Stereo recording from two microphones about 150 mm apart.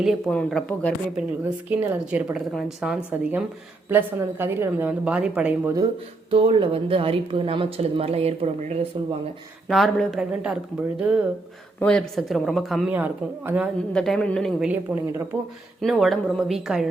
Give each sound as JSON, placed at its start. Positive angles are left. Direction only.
{"t": 0.0, "sound": "speech", "side_deg": 0}
{"t": 1.1, "sound": "a woman's voice", "side_deg": -10}
{"t": 6.3, "sound": "a woman's voice", "side_deg": -35}
{"t": 9.6, "sound": "speech", "side_deg": 0}
{"t": 11.8, "sound": "speech", "side_deg": 5}
{"t": 12.9, "sound": "a woman's voice", "side_deg": -10}
{"t": 13.9, "sound": "speech", "side_deg": 5}
{"t": 14.7, "sound": "a woman's voice", "side_deg": -10}
{"t": 15.8, "sound": "speech", "side_deg": 0}